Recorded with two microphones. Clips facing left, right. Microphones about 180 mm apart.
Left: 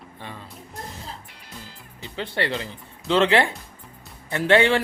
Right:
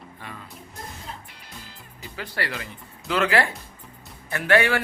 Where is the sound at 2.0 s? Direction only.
25° left (ahead or behind).